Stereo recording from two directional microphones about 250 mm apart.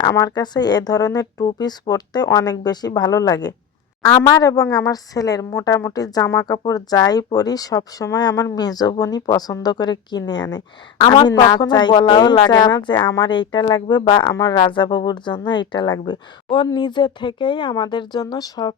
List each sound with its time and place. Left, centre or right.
0.0 s speech: centre